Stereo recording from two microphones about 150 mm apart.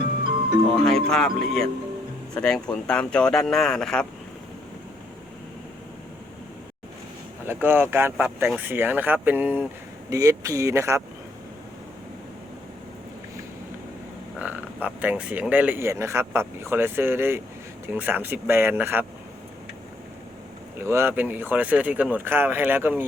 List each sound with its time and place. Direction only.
0.7 s speech: 5° left (ahead or behind)
7.4 s speech: 15° right (ahead or behind)
14.3 s speech: 10° right (ahead or behind)
20.8 s speech: 15° right (ahead or behind)